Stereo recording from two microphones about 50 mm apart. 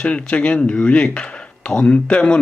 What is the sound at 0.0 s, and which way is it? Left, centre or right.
Speech, left.